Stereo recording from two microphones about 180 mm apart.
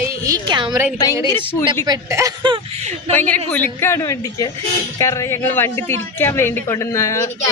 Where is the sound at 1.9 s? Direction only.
15° right (ahead or behind).